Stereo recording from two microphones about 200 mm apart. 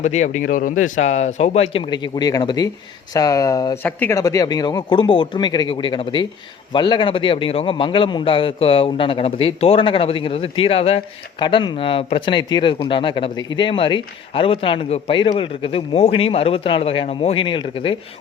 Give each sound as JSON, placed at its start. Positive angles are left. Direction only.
{"t": 0.0, "sound": "a man's voice", "side_deg": 35}